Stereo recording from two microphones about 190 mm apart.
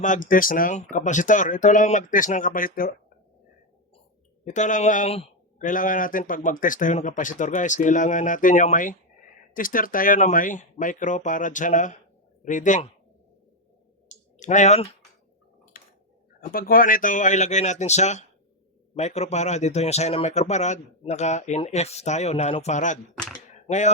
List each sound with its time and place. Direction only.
0.0 s a man's voice: 45° left (ahead or behind)
4.4 s a man's voice: 40° left (ahead or behind)
14.1 s clicking: 40° left (ahead or behind)
15.7 s a sound: 50° left (ahead or behind)
16.4 s speech: 50° left (ahead or behind)